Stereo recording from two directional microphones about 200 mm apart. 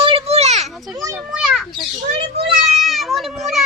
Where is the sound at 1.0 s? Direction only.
15° right (ahead or behind).